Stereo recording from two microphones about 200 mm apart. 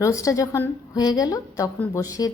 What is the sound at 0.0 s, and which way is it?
A woman's voice, 15° left (ahead or behind).